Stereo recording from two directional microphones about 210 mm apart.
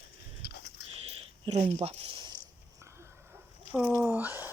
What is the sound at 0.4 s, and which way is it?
Dog, 50° left (ahead or behind).